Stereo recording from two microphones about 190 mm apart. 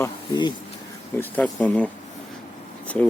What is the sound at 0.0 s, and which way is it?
Speech, 20° left (ahead or behind).